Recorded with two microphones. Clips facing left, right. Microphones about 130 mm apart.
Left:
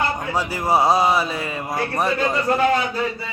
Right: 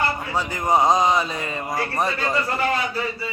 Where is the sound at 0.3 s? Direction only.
10° left (ahead or behind).